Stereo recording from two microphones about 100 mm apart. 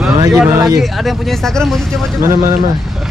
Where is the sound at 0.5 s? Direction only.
40° right (ahead or behind).